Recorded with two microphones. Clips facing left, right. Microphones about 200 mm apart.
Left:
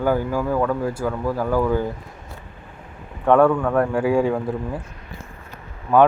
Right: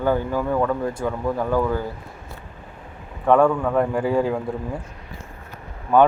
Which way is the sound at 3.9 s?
10° left (ahead or behind).